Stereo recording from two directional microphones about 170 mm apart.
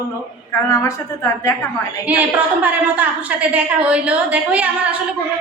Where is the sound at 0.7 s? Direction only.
20° left (ahead or behind).